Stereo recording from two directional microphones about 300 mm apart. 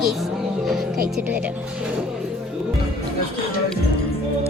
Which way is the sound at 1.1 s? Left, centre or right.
Centre.